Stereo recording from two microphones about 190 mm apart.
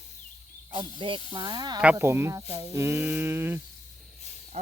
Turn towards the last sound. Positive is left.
turn(degrees=-35)  # may be behind; listen again after turning